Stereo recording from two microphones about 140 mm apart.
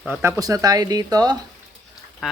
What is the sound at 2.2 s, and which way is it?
Duck, 5° right (ahead or behind).